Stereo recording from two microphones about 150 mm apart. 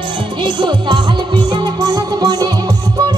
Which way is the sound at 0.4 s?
30° right (ahead or behind).